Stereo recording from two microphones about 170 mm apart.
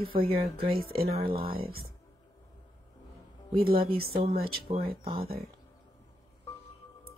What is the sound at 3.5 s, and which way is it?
Speech, 60° right (ahead or behind).